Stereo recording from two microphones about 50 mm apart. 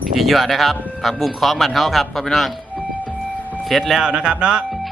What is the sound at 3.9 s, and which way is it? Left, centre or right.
Speech, centre.